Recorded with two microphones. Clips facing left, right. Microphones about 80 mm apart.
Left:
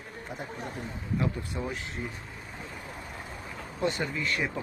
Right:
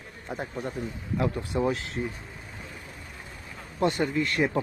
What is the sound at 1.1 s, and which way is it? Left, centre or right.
Speech, right.